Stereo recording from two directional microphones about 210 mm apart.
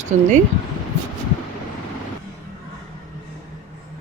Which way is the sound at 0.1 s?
35° right (ahead or behind).